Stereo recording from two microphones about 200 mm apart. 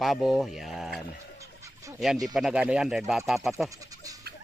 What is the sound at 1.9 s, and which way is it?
Speech, centre (ahead or behind).